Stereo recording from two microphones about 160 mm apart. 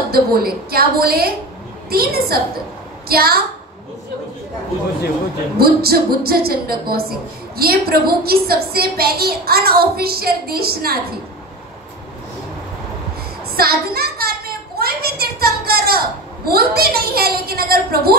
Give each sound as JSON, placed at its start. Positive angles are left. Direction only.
{"t": 0.1, "sound": "a woman's voice", "side_deg": -70}
{"t": 5.6, "sound": "a woman's voice", "side_deg": -70}
{"t": 13.6, "sound": "a woman's voice", "side_deg": -70}
{"t": 14.8, "sound": "a sound", "side_deg": -75}
{"t": 16.4, "sound": "a woman's voice", "side_deg": -70}